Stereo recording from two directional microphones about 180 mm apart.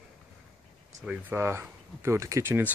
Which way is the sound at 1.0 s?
10° right (ahead or behind).